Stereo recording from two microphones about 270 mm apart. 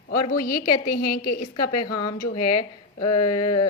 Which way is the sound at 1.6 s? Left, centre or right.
Left.